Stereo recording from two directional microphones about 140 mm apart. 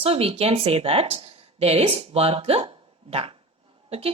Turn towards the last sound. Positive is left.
turn(degrees=-45)  # may be behind; listen again after turning